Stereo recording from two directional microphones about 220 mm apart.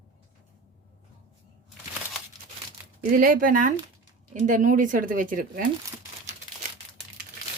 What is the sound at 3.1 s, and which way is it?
Speech, 40° right (ahead or behind).